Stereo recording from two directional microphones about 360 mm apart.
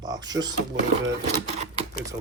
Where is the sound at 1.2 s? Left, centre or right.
Centre.